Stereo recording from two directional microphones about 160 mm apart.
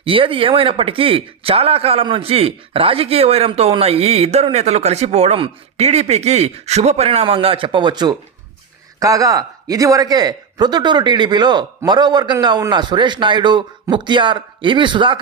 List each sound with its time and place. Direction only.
0.0 s a man's voice: 35° right (ahead or behind)